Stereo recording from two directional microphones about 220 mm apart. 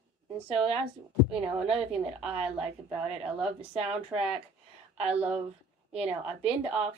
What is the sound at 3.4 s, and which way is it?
Speech, 25° right (ahead or behind).